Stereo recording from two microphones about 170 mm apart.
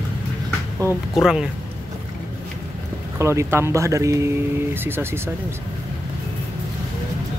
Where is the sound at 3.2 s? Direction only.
15° right (ahead or behind).